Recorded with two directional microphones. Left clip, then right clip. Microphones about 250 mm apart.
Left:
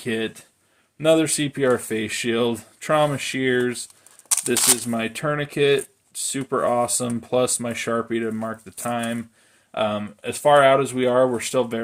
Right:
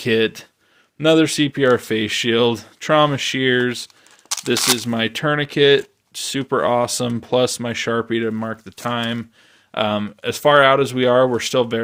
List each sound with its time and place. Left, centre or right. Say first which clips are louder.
0.0 s speech: right 9 dB; right
4.5 s speech: right 4 dB; centre
4.9 s speech: right 5 dB; right